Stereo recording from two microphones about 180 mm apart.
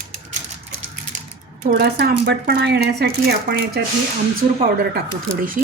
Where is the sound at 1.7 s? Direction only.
65° right (ahead or behind).